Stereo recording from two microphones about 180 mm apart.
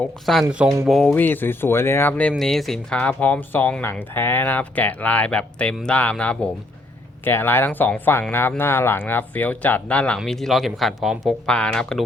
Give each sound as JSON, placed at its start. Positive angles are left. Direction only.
{"t": 0.0, "sound": "speech", "side_deg": 0}
{"t": 0.4, "sound": "speech", "side_deg": -15}
{"t": 0.9, "sound": "speech", "side_deg": 0}
{"t": 1.1, "sound": "speech", "side_deg": 10}